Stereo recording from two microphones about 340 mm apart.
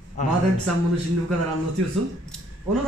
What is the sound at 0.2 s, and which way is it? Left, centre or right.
Speech, left.